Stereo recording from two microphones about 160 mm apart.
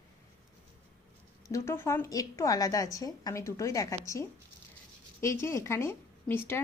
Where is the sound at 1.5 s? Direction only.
15° left (ahead or behind).